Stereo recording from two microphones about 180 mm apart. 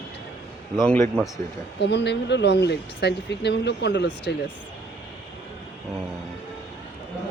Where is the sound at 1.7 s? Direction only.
75° left (ahead or behind).